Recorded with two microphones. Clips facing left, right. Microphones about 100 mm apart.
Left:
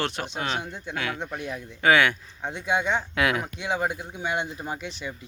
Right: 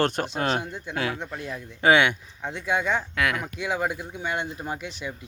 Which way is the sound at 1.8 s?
25° right (ahead or behind).